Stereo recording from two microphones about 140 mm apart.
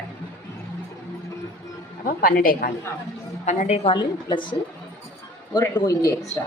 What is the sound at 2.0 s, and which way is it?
Speech, 90° left.